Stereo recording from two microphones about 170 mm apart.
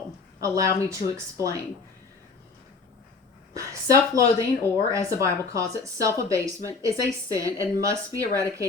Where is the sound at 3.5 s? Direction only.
20° right (ahead or behind).